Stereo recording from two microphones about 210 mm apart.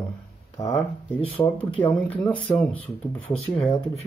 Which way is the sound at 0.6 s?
5° left (ahead or behind).